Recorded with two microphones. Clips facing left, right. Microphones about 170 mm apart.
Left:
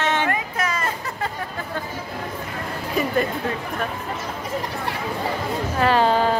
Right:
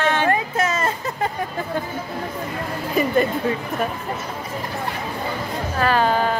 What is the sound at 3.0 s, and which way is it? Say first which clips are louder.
Speech: right 3 dB; centre (ahead or behind).